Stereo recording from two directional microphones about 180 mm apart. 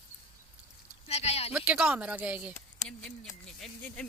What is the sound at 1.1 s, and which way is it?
Speech, 35° left (ahead or behind).